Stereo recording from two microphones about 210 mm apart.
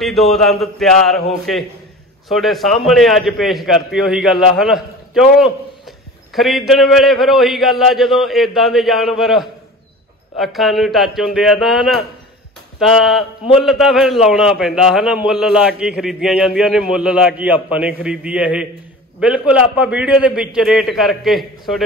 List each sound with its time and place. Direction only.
0.0 s a man's voice: centre (ahead or behind)
2.2 s a man's voice: centre (ahead or behind)